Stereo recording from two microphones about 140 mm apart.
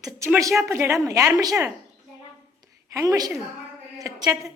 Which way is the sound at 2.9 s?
25° right (ahead or behind).